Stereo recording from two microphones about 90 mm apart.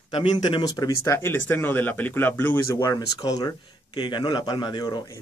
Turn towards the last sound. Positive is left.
turn(degrees=55)  # may be behind; listen again after turning